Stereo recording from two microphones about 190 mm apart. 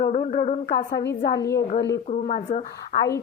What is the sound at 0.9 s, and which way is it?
Speech, 60° left (ahead or behind).